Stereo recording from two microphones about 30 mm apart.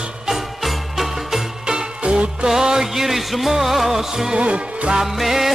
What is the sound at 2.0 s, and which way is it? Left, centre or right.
Music, right.